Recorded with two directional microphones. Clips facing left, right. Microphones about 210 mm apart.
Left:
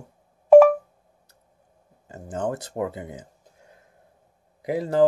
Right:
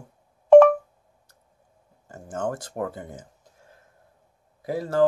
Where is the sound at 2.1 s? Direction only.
15° left (ahead or behind).